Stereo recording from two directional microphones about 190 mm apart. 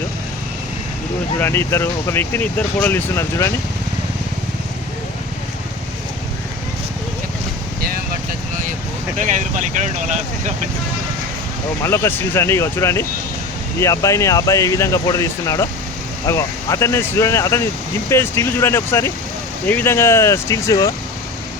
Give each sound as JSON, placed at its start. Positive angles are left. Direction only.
{"t": 1.4, "sound": "speech", "side_deg": 15}
{"t": 9.1, "sound": "speech", "side_deg": -40}
{"t": 11.8, "sound": "speech", "side_deg": 15}